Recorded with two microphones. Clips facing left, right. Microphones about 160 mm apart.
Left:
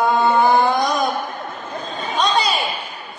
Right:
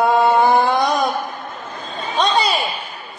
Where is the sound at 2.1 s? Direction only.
30° right (ahead or behind).